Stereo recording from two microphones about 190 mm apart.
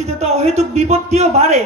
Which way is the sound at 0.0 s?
35° right (ahead or behind).